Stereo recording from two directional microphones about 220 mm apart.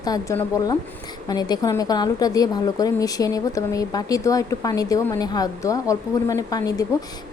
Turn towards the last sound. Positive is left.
turn(degrees=15)  # may be behind; listen again after turning